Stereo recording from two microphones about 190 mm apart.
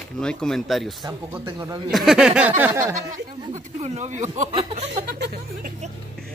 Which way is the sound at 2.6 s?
15° right (ahead or behind).